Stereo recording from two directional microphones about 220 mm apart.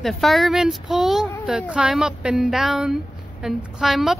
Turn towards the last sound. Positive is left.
turn(degrees=0)  # may be behind; listen again after turning